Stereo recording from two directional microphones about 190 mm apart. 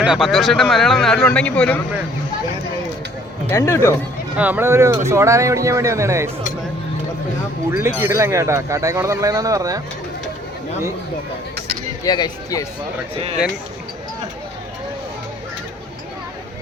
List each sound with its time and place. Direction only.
0.0 s speech: 5° right (ahead or behind)
3.5 s speech: 15° left (ahead or behind)
4.4 s speech: 10° right (ahead or behind)
7.7 s speech: 10° right (ahead or behind)
12.0 s speech: 20° left (ahead or behind)
13.1 s speech: 30° right (ahead or behind)